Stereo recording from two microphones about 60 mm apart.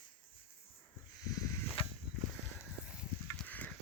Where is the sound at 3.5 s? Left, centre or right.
Left.